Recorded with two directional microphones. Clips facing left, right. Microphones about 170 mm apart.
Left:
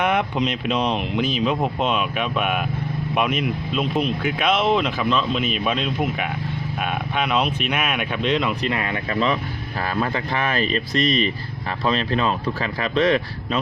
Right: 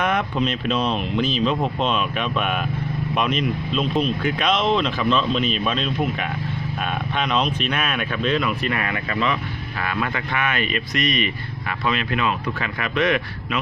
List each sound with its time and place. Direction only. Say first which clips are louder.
0.0 s speech: left 1 dB; 15° left (ahead or behind); by 13.6 s 30° left (ahead or behind)